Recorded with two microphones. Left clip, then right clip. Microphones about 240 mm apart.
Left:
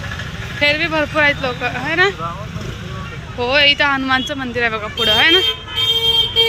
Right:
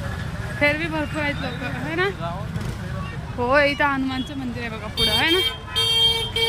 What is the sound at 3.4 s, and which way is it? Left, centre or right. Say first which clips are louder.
Speech: left 5 dB; centre.